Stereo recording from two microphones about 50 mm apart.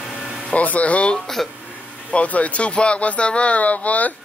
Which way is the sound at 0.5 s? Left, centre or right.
Left.